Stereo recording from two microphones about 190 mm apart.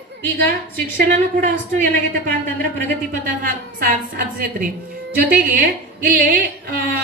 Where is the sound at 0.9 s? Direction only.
45° right (ahead or behind).